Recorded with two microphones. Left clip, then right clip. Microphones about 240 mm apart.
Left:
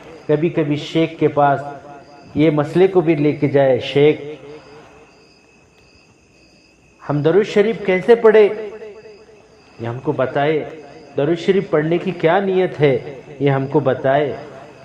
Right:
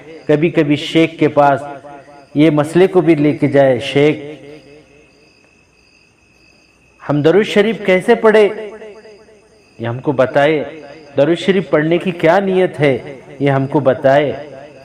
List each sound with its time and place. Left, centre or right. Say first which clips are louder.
0.3 s a man's voice: right 4 dB; right
7.0 s a man's voice: right 3 dB; right